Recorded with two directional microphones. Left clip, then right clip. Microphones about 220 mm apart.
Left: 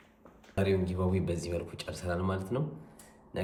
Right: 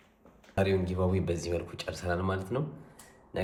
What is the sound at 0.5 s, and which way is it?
A man's voice, centre (ahead or behind).